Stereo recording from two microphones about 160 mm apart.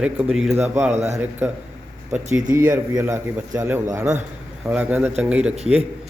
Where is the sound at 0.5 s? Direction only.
10° right (ahead or behind).